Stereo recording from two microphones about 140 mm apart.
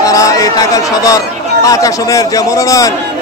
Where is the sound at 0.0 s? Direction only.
25° left (ahead or behind).